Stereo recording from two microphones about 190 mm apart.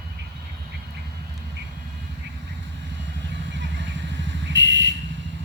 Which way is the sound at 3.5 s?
70° right (ahead or behind).